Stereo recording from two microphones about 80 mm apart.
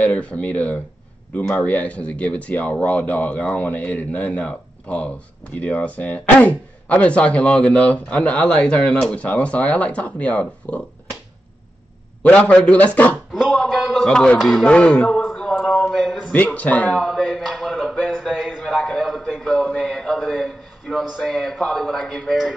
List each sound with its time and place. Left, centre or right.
0.0 s speech: centre
12.2 s speech: centre
13.3 s a sound: centre
14.0 s speech: centre
15.2 s a sound: centre
16.5 s speech: centre
17.0 s speech: centre